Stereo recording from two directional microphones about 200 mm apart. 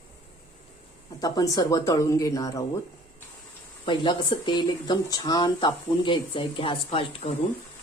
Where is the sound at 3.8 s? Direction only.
25° left (ahead or behind).